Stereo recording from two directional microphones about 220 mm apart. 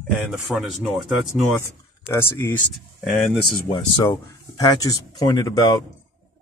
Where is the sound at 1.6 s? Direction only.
10° left (ahead or behind).